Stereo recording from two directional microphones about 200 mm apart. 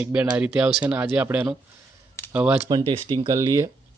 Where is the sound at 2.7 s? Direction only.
20° right (ahead or behind).